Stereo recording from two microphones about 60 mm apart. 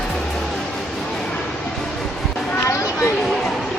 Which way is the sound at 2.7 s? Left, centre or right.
Left.